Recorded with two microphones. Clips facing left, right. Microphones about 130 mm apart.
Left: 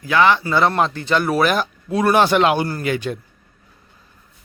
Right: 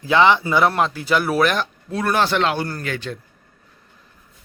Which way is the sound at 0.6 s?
Centre (ahead or behind).